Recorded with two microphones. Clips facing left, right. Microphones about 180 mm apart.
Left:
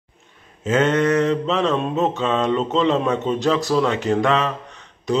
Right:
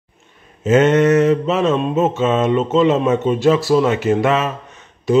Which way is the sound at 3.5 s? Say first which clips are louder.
Right 4 dB; 5° right (ahead or behind).